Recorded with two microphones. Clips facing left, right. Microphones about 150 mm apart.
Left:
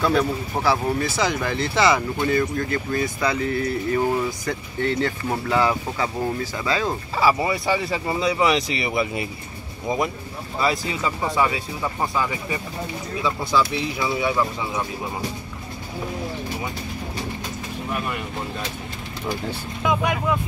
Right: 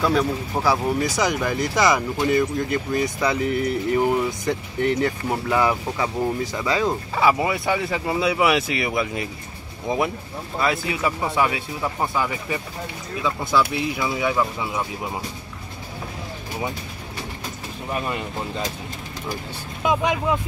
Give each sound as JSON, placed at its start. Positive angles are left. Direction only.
{"t": 0.7, "sound": "speech", "side_deg": -15}
{"t": 7.2, "sound": "speech", "side_deg": 0}
{"t": 19.8, "sound": "speech", "side_deg": -20}